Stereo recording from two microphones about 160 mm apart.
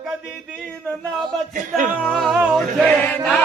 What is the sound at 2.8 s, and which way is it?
Chant, 10° left (ahead or behind).